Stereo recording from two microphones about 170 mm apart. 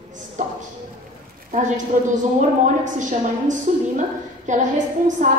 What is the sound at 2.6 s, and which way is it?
A woman's voice, 45° right (ahead or behind).